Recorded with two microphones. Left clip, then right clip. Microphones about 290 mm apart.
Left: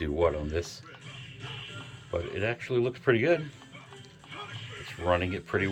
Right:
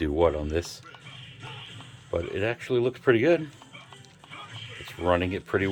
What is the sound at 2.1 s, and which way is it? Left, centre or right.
Speech, right.